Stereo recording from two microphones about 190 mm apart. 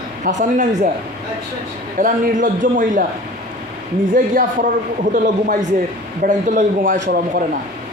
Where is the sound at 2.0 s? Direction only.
45° right (ahead or behind).